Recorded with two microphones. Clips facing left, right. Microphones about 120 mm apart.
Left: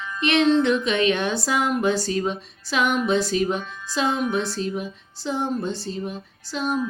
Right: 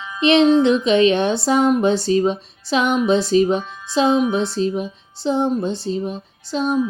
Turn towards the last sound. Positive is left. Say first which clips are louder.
# right 5 dB
turn(degrees=-20)  # may be behind; listen again after turning